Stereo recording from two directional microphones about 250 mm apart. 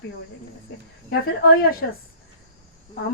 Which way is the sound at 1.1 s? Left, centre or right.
Left.